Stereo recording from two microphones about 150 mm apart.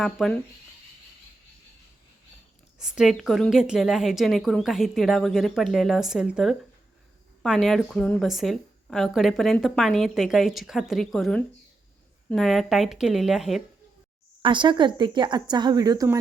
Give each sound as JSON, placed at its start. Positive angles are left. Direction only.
{"t": 0.0, "sound": "speech", "side_deg": 0}
{"t": 2.7, "sound": "speech", "side_deg": -5}
{"t": 14.4, "sound": "a woman's voice", "side_deg": -30}